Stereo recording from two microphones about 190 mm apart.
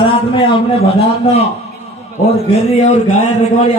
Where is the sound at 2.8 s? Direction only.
35° left (ahead or behind).